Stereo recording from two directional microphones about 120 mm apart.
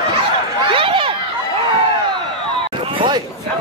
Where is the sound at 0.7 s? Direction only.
50° right (ahead or behind).